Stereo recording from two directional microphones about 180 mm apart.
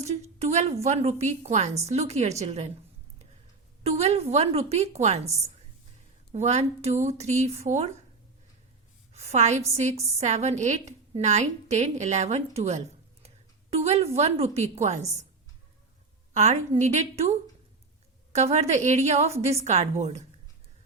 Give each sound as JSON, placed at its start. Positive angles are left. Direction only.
{"t": 0.1, "sound": "a woman's voice", "side_deg": -40}
{"t": 3.8, "sound": "a woman's voice", "side_deg": -35}
{"t": 6.3, "sound": "a woman's voice", "side_deg": -40}
{"t": 9.1, "sound": "a woman's voice", "side_deg": -40}
{"t": 16.3, "sound": "a woman's voice", "side_deg": -40}